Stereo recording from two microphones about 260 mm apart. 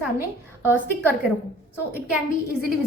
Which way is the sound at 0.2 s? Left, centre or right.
Centre.